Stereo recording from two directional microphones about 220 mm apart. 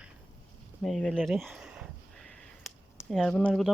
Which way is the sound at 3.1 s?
Centre (ahead or behind).